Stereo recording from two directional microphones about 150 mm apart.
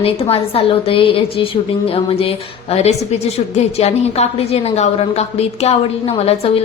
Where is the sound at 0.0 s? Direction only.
40° left (ahead or behind).